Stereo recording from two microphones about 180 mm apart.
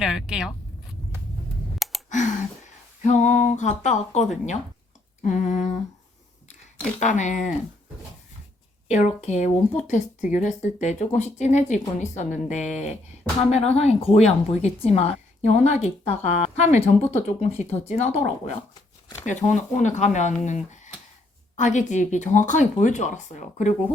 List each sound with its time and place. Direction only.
0.0 s speech: 5° right (ahead or behind)
2.0 s a sound: 40° left (ahead or behind)
3.0 s speech: 40° left (ahead or behind)
7.0 s speech: 40° left (ahead or behind)
8.9 s speech: 40° left (ahead or behind)